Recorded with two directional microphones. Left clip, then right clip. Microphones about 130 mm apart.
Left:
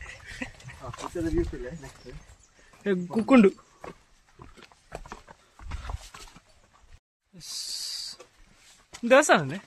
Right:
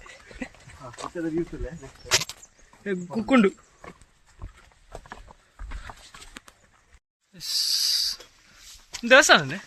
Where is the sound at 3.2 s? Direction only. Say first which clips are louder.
Left 1 dB; 15° left (ahead or behind).